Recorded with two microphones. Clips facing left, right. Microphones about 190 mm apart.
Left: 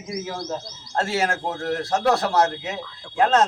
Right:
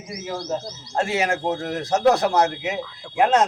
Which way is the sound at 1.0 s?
15° right (ahead or behind).